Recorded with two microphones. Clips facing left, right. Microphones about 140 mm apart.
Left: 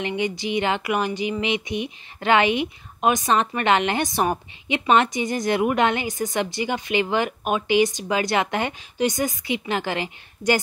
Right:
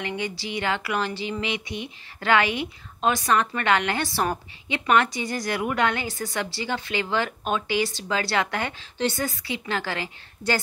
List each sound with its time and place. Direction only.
0.0 s speech: 20° left (ahead or behind)